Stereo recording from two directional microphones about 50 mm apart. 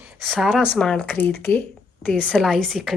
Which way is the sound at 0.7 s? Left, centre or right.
Centre.